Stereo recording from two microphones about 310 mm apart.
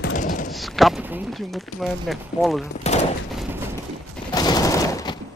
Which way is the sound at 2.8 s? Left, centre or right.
Left.